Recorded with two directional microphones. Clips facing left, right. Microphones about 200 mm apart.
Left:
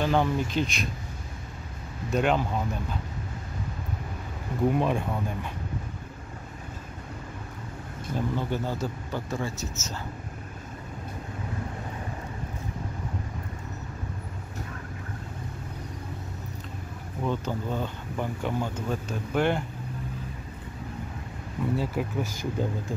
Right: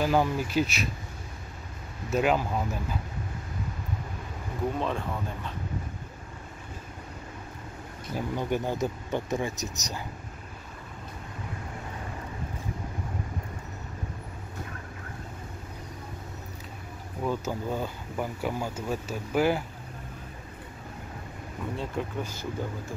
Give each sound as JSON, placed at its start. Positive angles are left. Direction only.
{"t": 0.0, "sound": "speech", "side_deg": -5}
{"t": 2.0, "sound": "speech", "side_deg": -5}
{"t": 4.7, "sound": "speech", "side_deg": 15}
{"t": 8.1, "sound": "speech", "side_deg": -15}
{"t": 17.2, "sound": "speech", "side_deg": -10}
{"t": 21.7, "sound": "speech", "side_deg": 5}